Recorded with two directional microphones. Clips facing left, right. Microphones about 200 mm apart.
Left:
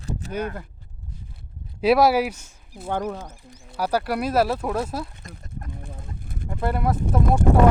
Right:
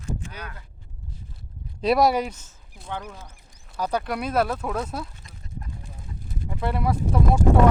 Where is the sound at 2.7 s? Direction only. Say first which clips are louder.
Left 8 dB; 55° left (ahead or behind).